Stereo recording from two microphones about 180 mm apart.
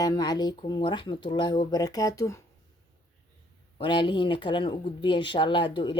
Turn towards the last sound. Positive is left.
turn(degrees=25)  # may be behind; listen again after turning